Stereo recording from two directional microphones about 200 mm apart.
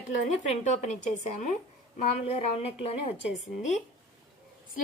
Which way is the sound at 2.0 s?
35° left (ahead or behind).